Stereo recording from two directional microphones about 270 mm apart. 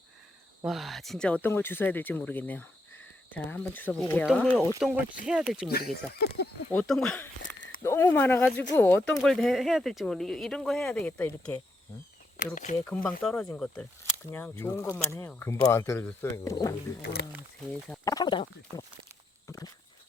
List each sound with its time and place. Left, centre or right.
0.6 s speech: centre
6.1 s speech: left
6.7 s speech: centre
7.4 s a sound: left
7.8 s speech: centre
12.7 s speech: centre
17.0 s speech: left
17.7 s speech: centre
19.5 s walk: centre